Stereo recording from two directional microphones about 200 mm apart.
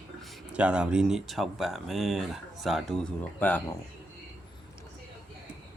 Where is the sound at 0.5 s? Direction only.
5° right (ahead or behind).